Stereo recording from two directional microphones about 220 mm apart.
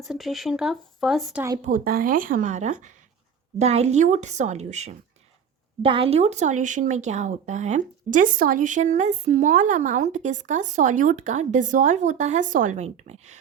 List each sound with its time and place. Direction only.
0.0 s speech: centre (ahead or behind)
1.6 s speech: 40° right (ahead or behind)